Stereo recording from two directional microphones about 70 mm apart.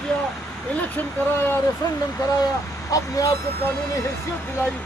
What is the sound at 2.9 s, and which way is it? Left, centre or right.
Speech, left.